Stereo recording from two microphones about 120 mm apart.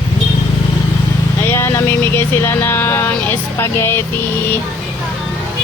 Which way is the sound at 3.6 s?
20° left (ahead or behind).